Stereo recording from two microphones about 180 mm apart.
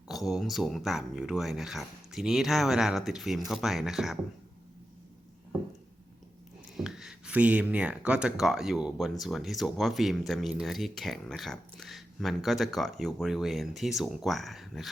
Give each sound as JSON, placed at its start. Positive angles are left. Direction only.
{"t": 0.1, "sound": "speech", "side_deg": 0}
{"t": 6.7, "sound": "speech", "side_deg": -5}